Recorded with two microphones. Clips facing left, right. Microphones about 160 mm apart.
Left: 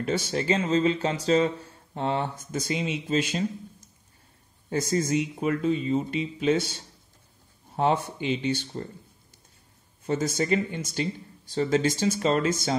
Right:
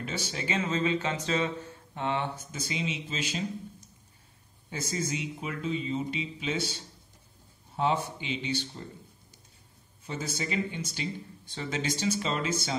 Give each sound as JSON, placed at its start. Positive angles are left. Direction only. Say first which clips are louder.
{"t": 0.0, "sound": "speech", "louder": "left 8 dB", "side_deg": 45}
{"t": 0.7, "sound": "a sound", "louder": "left 5 dB", "side_deg": 35}
{"t": 2.5, "sound": "speech", "louder": "left 9 dB", "side_deg": 50}
{"t": 4.6, "sound": "speech", "louder": "left 8 dB", "side_deg": 50}
{"t": 10.0, "sound": "speech", "louder": "left 9 dB", "side_deg": 45}